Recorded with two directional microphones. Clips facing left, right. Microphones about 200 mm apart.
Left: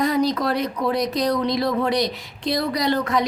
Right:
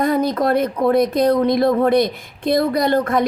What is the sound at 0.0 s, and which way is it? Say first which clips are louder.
A woman's voice: right 3 dB; 55° right (ahead or behind).